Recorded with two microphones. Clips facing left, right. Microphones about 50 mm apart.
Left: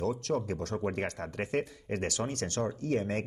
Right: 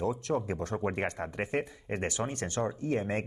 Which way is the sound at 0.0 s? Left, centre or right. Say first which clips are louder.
Even; centre.